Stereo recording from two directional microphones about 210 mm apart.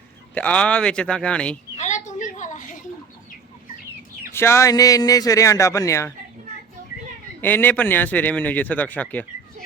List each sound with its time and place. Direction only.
0.3 s speech: 5° left (ahead or behind)
1.7 s a sound: 35° left (ahead or behind)
4.3 s a man's voice: 10° left (ahead or behind)
7.4 s a man's voice: 10° left (ahead or behind)